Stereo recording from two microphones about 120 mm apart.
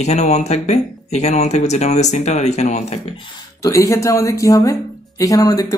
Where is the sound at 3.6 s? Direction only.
25° left (ahead or behind).